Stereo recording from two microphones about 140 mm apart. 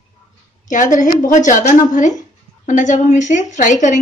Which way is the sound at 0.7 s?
65° left (ahead or behind).